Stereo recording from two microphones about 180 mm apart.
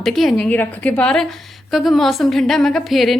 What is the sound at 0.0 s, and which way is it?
A woman's voice, centre (ahead or behind).